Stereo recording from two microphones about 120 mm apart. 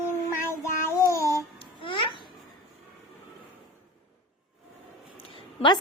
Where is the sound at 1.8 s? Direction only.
45° left (ahead or behind).